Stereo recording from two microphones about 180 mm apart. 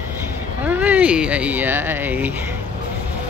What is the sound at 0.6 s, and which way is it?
Speech, 10° right (ahead or behind).